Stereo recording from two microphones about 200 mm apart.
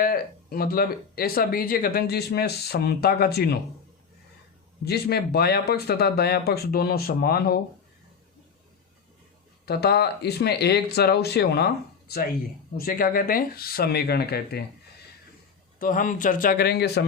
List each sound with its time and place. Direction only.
0.0 s speech: 45° left (ahead or behind)
4.9 s speech: 55° left (ahead or behind)
9.6 s speech: 50° left (ahead or behind)
15.8 s speech: 45° left (ahead or behind)